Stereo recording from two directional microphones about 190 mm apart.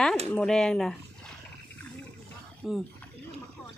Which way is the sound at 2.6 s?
Centre (ahead or behind).